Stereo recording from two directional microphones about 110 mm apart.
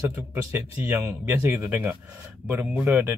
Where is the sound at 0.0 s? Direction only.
25° right (ahead or behind).